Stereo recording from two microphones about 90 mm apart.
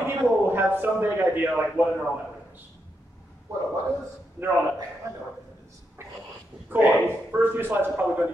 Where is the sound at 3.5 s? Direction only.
35° right (ahead or behind).